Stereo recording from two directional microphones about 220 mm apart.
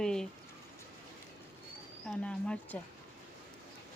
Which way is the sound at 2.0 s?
5° left (ahead or behind).